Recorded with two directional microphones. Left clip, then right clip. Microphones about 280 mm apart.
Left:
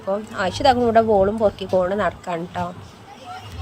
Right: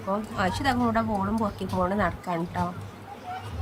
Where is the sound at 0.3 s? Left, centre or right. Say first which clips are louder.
Left 10 dB; centre.